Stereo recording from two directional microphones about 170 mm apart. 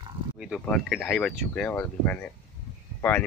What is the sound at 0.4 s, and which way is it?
Speech, centre (ahead or behind).